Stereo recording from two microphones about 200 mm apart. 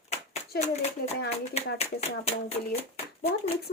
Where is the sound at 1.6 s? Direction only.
30° left (ahead or behind).